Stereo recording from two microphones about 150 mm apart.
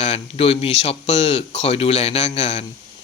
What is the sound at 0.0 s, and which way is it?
A man's voice, 40° left (ahead or behind).